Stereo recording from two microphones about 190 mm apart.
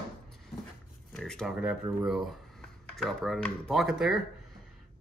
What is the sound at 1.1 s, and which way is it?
Speech, centre (ahead or behind).